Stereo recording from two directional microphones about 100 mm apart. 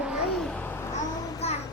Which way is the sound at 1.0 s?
35° left (ahead or behind).